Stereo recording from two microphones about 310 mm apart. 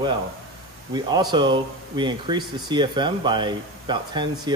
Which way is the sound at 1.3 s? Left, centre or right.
Centre.